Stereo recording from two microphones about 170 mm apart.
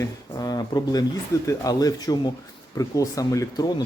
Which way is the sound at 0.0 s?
20° left (ahead or behind).